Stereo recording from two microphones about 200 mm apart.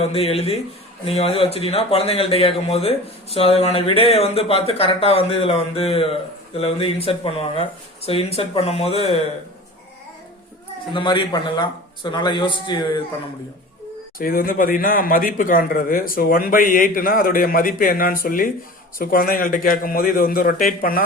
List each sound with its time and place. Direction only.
0.0 s a man's voice: 30° left (ahead or behind)
10.9 s speech: 25° left (ahead or behind)
14.2 s speech: 45° left (ahead or behind)